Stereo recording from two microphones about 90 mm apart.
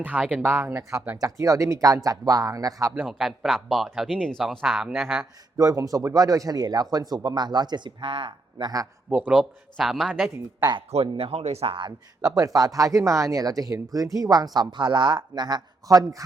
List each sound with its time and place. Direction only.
0.4 s speech: 30° right (ahead or behind)
3.1 s speech: centre (ahead or behind)
5.5 s speech: 40° right (ahead or behind)
8.0 s speech: 75° right (ahead or behind)
9.0 s speech: 15° right (ahead or behind)
9.7 s speech: centre (ahead or behind)
10.6 s speech: 55° right (ahead or behind)
11.0 s speech: 90° right
11.9 s speech: 45° right (ahead or behind)